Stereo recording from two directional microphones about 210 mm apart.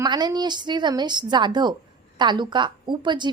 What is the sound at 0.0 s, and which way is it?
A woman's voice, 20° right (ahead or behind).